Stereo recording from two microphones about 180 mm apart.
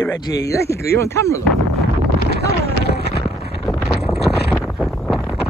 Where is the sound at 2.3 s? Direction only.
60° left (ahead or behind).